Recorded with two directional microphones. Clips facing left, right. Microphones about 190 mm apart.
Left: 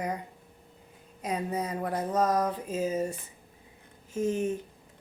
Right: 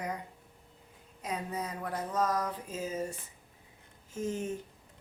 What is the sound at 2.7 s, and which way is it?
Speech, 15° left (ahead or behind).